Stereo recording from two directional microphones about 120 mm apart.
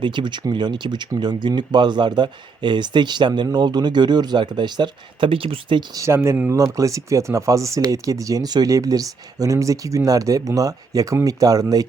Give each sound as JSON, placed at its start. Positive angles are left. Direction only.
{"t": 0.0, "sound": "speech", "side_deg": -40}
{"t": 6.0, "sound": "speech", "side_deg": -20}
{"t": 6.5, "sound": "speech", "side_deg": -25}